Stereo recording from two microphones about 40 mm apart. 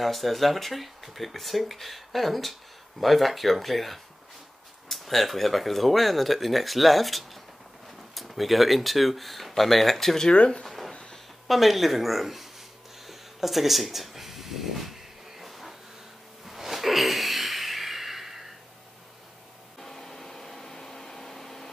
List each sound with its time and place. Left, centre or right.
0.0 s speech: centre
10.3 s speech: left
10.6 s a sound: centre
10.9 s a sound: centre
11.4 s speech: centre
13.0 s a sound: centre
15.3 s vehicle: centre
16.4 s snort: centre
19.8 s vacuum cleaner: centre